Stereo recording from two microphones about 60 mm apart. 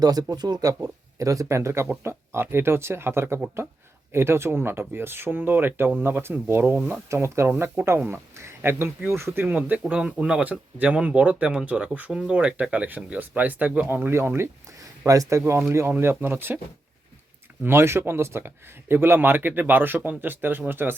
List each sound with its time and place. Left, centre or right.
0.0 s speech: right
7.1 s speech: right
9.5 s speech: right
13.9 s speech: right
15.0 s speech: right
15.9 s speech: right
17.6 s speech: right